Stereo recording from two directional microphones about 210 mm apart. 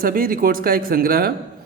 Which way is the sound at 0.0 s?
45° right (ahead or behind).